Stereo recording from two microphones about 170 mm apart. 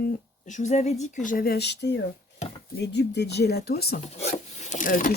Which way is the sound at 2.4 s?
40° left (ahead or behind).